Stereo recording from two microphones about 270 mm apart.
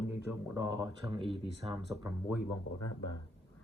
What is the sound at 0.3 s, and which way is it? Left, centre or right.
Speech, centre.